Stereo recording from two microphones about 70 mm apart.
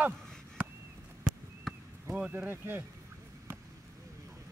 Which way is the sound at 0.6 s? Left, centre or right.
Centre.